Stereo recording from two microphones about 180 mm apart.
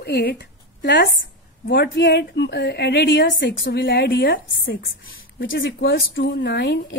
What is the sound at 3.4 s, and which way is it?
A woman's voice, 75° left (ahead or behind).